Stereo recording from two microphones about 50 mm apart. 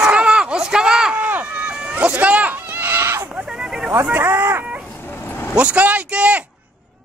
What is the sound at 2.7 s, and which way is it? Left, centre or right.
Goat, right.